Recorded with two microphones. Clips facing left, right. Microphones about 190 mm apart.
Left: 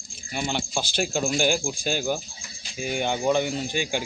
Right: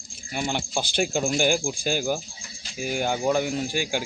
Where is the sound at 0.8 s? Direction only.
55° right (ahead or behind).